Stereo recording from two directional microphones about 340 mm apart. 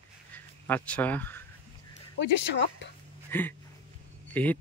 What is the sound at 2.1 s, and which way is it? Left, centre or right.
Speech, left.